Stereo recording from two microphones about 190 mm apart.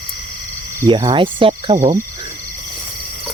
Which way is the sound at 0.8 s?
25° right (ahead or behind).